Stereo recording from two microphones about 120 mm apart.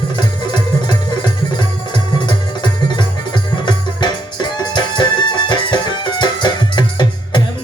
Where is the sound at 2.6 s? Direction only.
40° left (ahead or behind).